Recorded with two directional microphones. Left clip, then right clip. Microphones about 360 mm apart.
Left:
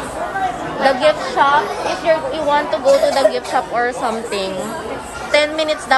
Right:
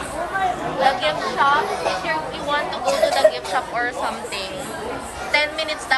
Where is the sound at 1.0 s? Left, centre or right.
Centre.